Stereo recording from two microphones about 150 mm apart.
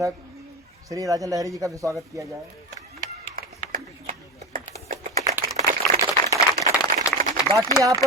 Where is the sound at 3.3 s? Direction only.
65° right (ahead or behind).